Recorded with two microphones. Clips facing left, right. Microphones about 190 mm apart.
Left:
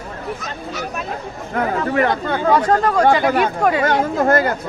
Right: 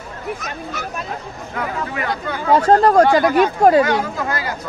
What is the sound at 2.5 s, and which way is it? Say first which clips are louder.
Speech: right 5 dB; 30° right (ahead or behind).